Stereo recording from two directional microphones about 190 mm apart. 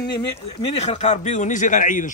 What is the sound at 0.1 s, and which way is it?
A man's voice, 25° left (ahead or behind).